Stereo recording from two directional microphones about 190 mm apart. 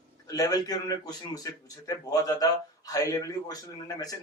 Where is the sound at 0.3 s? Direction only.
20° left (ahead or behind).